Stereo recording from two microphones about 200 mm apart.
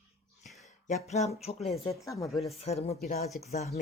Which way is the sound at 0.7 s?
35° left (ahead or behind).